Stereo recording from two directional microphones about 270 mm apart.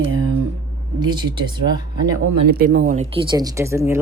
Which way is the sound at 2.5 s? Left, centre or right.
Right.